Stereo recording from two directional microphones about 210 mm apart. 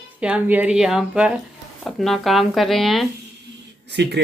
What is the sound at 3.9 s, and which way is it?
Speech, 55° right (ahead or behind).